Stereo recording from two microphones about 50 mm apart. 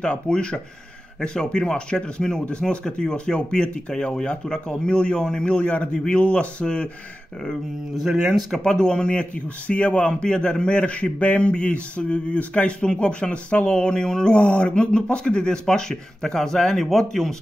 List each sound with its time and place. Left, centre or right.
0.0 s speech: centre
8.1 s speech: centre
8.6 s speech: centre